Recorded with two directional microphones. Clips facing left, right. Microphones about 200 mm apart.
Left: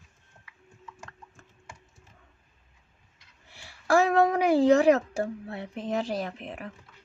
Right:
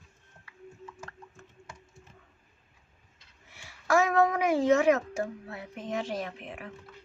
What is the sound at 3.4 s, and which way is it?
Speech, 30° left (ahead or behind).